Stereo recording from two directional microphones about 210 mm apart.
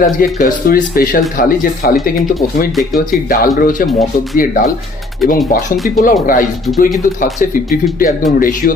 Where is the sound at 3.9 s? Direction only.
Centre (ahead or behind).